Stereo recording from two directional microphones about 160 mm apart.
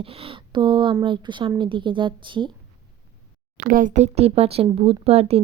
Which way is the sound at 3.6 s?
60° right (ahead or behind).